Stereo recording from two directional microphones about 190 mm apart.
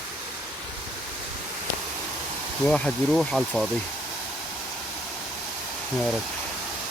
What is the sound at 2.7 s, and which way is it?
Speech, 5° left (ahead or behind).